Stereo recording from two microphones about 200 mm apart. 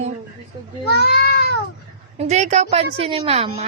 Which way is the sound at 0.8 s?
55° left (ahead or behind).